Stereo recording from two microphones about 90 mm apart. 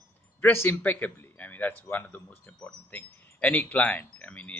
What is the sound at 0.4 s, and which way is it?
Speech, 25° left (ahead or behind).